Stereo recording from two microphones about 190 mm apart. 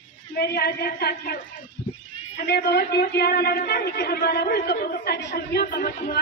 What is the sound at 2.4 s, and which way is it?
Speech, 60° left (ahead or behind).